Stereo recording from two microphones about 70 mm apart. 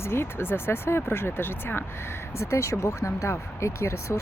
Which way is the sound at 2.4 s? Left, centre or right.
Left.